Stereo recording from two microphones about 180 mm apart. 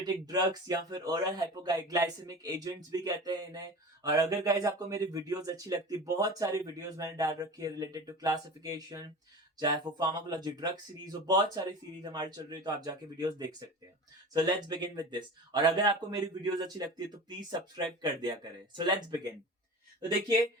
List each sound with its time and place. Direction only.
0.0 s speech: 20° right (ahead or behind)